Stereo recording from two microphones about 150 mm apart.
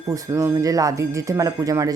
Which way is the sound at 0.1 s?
20° right (ahead or behind).